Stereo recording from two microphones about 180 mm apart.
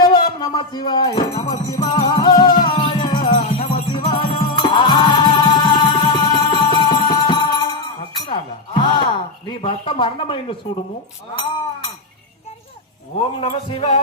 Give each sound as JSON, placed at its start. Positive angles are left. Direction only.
{"t": 0.0, "sound": "music", "side_deg": 25}
{"t": 8.3, "sound": "a sound", "side_deg": 25}
{"t": 13.4, "sound": "speech", "side_deg": 30}